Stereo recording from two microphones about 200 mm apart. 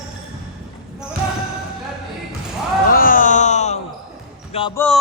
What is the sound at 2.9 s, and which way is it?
Music, 45° left (ahead or behind).